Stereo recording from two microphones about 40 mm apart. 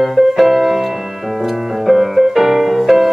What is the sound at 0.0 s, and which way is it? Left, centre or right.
Music, centre.